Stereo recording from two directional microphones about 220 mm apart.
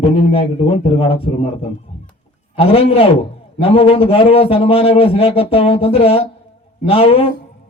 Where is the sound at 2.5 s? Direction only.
25° left (ahead or behind).